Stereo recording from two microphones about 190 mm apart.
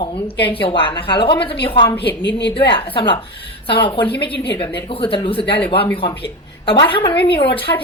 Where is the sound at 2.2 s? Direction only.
70° left (ahead or behind).